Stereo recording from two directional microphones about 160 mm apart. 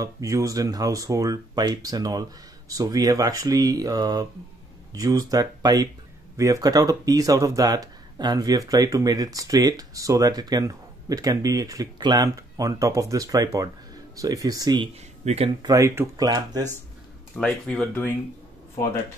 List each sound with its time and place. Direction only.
0.0 s speech: 20° right (ahead or behind)
15.2 s speech: 40° right (ahead or behind)
15.6 s speech: 20° right (ahead or behind)
17.4 s speech: 5° left (ahead or behind)